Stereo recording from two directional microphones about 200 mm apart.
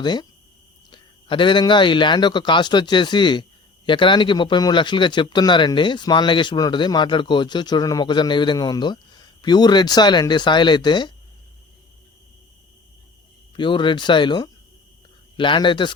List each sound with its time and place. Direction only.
0.0 s speech: 20° left (ahead or behind)
13.6 s speech: 25° left (ahead or behind)